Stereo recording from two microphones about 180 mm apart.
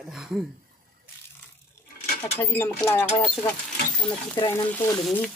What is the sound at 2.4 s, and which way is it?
Speech, 10° left (ahead or behind).